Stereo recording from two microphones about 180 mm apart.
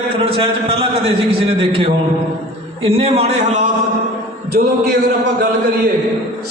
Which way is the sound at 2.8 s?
30° right (ahead or behind).